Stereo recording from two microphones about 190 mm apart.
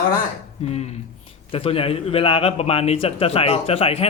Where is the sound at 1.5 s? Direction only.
30° left (ahead or behind).